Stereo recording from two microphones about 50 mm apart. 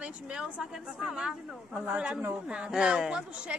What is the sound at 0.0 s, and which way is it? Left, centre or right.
A woman's voice, centre.